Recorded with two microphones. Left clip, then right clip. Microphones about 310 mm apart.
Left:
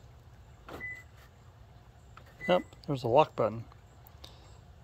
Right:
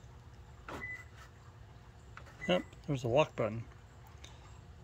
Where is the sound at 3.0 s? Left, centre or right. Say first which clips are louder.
Left 6 dB; centre.